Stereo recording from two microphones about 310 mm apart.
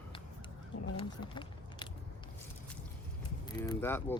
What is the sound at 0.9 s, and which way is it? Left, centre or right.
Speech, centre.